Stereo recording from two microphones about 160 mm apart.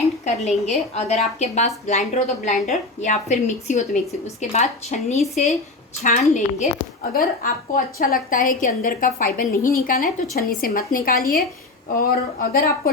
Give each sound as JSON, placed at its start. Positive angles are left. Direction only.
{"t": 0.4, "sound": "a woman's voice", "side_deg": 45}
{"t": 5.1, "sound": "speech", "side_deg": 0}
{"t": 6.0, "sound": "a woman's voice", "side_deg": 50}
{"t": 7.1, "sound": "a woman's voice", "side_deg": 65}